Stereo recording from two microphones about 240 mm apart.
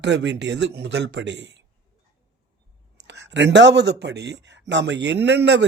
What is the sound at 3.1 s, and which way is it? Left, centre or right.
Speech, right.